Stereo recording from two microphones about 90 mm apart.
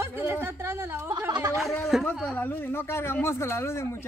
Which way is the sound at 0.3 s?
25° right (ahead or behind).